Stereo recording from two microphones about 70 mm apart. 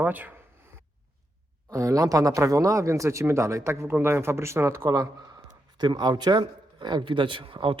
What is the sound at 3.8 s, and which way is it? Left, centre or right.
Speech, right.